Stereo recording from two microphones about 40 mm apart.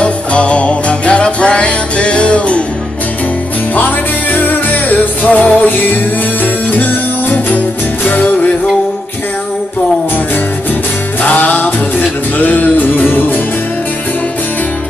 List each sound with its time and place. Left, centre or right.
0.0 s music: left
3.7 s music: left
11.2 s music: left